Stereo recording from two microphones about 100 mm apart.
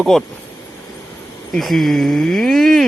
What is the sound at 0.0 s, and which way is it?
Speech, 5° left (ahead or behind).